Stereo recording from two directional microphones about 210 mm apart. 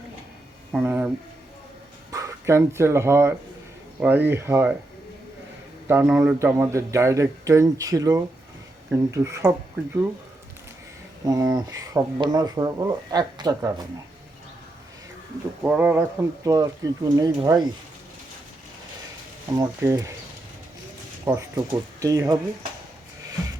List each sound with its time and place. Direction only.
0.7 s speech: 5° right (ahead or behind)
5.9 s speech: 10° right (ahead or behind)
11.3 s speech: 20° right (ahead or behind)
15.6 s speech: 10° right (ahead or behind)
19.5 s speech: 15° right (ahead or behind)
21.2 s speech: 15° right (ahead or behind)